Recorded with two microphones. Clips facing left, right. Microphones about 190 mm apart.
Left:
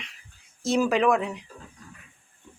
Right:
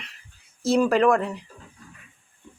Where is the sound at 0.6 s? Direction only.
Centre (ahead or behind).